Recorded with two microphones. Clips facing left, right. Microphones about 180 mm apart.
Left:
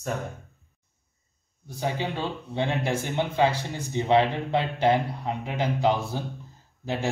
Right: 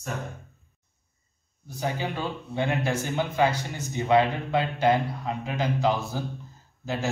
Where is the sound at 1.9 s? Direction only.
25° left (ahead or behind).